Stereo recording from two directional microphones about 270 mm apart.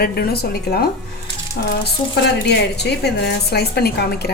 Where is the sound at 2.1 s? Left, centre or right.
Left.